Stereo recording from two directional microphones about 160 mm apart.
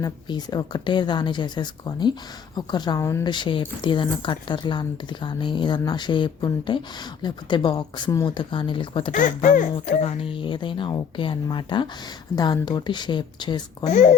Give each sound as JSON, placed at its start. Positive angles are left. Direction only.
{"t": 0.0, "sound": "speech", "side_deg": 25}
{"t": 3.3, "sound": "speech", "side_deg": 30}
{"t": 9.1, "sound": "speech", "side_deg": 50}
{"t": 13.8, "sound": "speech", "side_deg": 50}